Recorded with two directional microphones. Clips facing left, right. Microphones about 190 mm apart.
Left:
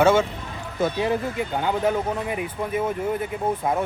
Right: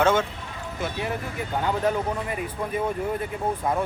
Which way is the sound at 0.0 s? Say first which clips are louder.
Left 4 dB; 10° left (ahead or behind).